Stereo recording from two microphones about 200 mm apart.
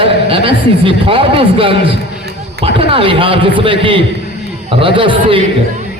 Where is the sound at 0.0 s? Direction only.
25° right (ahead or behind).